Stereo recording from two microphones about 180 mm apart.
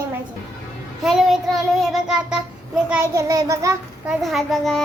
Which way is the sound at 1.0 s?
Centre (ahead or behind).